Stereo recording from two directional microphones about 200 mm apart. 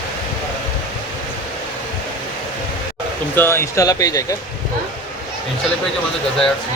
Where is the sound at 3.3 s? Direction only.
10° left (ahead or behind).